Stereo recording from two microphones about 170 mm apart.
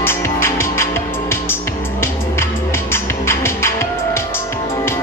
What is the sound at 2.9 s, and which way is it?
Music, 15° left (ahead or behind).